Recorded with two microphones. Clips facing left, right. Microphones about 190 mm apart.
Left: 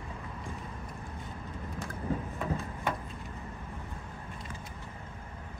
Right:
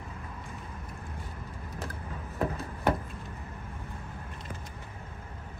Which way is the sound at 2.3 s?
65° right (ahead or behind).